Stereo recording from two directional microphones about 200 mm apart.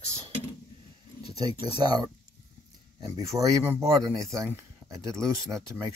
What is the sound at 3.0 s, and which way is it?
Speech, 15° right (ahead or behind).